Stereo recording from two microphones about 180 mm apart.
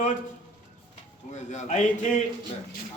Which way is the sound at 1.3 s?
40° left (ahead or behind).